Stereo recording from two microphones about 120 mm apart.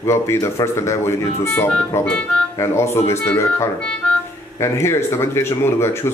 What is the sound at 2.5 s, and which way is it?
Speech, 20° left (ahead or behind).